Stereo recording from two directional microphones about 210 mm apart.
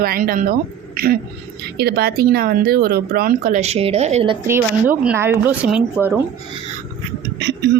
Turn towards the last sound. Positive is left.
turn(degrees=-55)  # may be behind; listen again after turning